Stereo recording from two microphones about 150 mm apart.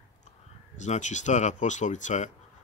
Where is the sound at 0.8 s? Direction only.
55° left (ahead or behind).